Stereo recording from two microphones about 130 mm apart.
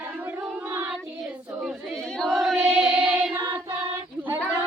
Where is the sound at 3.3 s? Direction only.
25° right (ahead or behind).